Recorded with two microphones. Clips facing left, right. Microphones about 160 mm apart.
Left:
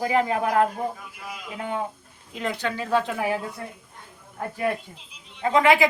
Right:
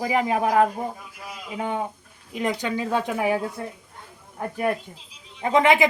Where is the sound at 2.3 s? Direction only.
15° right (ahead or behind).